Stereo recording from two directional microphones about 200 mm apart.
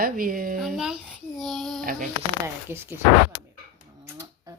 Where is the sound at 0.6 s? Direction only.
5° right (ahead or behind).